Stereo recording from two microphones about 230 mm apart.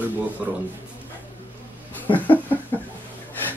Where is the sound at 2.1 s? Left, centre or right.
Left.